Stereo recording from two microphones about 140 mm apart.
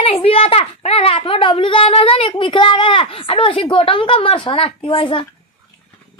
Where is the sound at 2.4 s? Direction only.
35° left (ahead or behind).